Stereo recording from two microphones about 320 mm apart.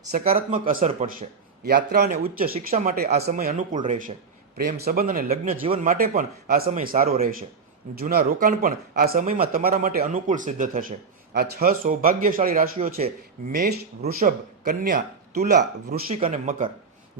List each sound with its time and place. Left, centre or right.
0.1 s a man's voice: right